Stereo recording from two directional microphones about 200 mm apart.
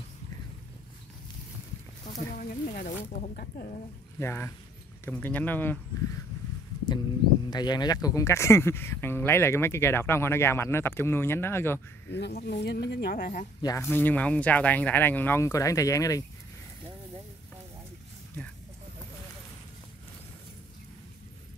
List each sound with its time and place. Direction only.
2.1 s snake: 45° left (ahead or behind)
4.2 s speech: 10° left (ahead or behind)
7.4 s speech: 20° left (ahead or behind)
12.1 s speech: 55° left (ahead or behind)
13.6 s speech: 15° left (ahead or behind)